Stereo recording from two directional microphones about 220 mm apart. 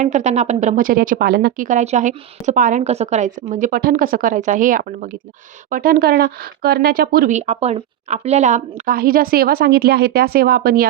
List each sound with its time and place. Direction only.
0.0 s speech: 30° right (ahead or behind)